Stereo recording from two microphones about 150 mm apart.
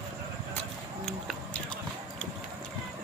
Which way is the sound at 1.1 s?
5° left (ahead or behind).